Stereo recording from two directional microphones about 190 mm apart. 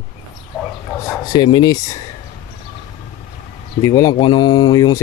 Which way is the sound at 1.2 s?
25° left (ahead or behind).